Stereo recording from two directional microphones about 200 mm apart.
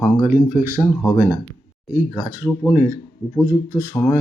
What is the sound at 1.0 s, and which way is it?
Speech, 15° left (ahead or behind).